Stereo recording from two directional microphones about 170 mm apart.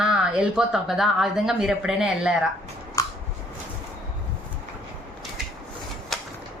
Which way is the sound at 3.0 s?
20° left (ahead or behind).